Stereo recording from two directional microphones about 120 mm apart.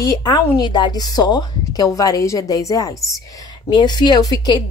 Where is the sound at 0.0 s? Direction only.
30° left (ahead or behind).